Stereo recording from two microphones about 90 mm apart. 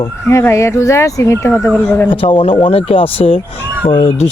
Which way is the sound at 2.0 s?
75° left (ahead or behind).